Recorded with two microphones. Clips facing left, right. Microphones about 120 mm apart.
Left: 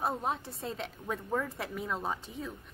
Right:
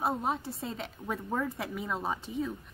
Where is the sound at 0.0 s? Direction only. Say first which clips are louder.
Right 2 dB; 5° right (ahead or behind).